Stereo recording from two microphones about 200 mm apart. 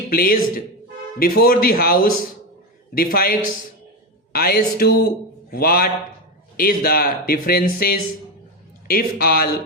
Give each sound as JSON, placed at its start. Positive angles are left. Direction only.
{"t": 0.1, "sound": "a man's voice", "side_deg": 45}